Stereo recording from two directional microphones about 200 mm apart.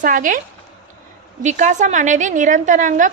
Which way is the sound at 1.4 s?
35° right (ahead or behind).